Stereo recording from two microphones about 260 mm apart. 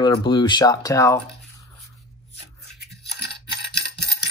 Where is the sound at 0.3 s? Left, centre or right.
Centre.